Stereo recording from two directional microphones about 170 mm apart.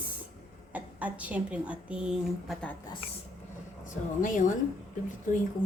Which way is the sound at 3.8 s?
50° left (ahead or behind).